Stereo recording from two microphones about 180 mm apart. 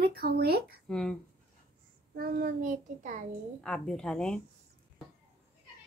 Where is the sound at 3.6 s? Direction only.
5° left (ahead or behind).